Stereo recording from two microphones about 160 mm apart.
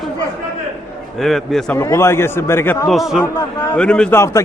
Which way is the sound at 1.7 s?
15° left (ahead or behind).